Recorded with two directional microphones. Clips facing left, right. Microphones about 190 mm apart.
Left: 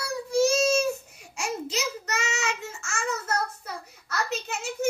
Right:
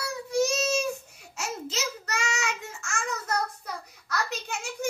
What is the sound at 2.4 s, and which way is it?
Babbling, centre (ahead or behind).